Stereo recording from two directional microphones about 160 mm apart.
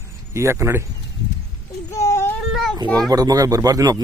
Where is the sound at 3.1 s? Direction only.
25° right (ahead or behind).